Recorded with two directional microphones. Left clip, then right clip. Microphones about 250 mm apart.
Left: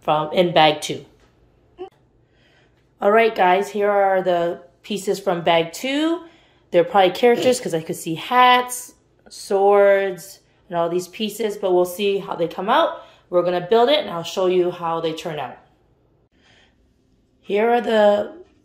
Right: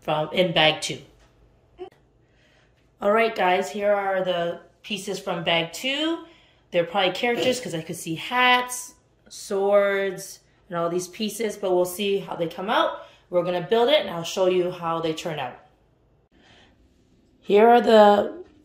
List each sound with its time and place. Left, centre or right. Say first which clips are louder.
0.0 s speech: left 5 dB; centre
3.0 s speech: left 5 dB; centre
17.4 s a woman's voice: right 3 dB; centre